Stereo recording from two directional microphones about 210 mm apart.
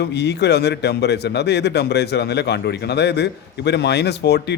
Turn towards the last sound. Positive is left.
turn(degrees=50)  # may be behind; listen again after turning